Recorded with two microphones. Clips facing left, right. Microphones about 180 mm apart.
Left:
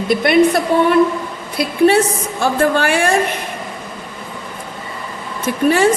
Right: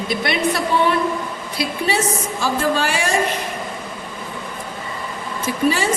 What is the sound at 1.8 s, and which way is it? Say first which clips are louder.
A woman's voice: left 10 dB; 55° left (ahead or behind).